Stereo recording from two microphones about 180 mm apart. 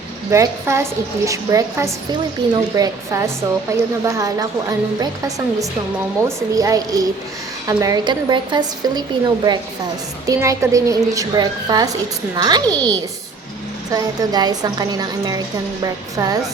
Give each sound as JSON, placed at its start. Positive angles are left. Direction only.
{"t": 0.3, "sound": "a woman's voice", "side_deg": -15}
{"t": 6.2, "sound": "speech", "side_deg": -20}
{"t": 12.6, "sound": "a child's voice", "side_deg": 5}
{"t": 13.9, "sound": "speech", "side_deg": -20}